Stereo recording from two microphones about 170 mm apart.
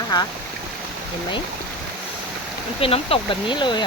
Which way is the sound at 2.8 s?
35° left (ahead or behind).